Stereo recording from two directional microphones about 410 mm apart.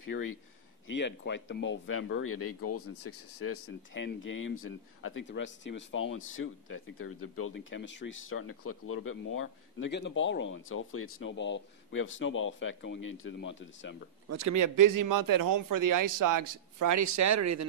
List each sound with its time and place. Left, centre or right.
0.1 s speech: left
14.3 s speech: right